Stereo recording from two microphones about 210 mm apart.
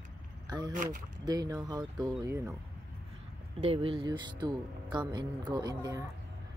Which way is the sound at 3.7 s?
25° right (ahead or behind).